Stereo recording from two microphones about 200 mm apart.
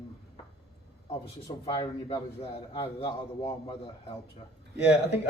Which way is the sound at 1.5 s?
20° left (ahead or behind).